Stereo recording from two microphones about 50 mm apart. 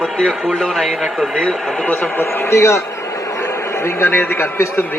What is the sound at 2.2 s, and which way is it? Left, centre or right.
Speech, left.